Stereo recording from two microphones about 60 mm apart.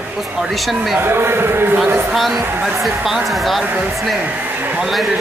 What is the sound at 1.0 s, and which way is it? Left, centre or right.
Speech, right.